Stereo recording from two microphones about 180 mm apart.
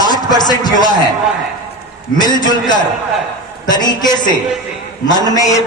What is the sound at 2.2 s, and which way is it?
Speech, 25° left (ahead or behind).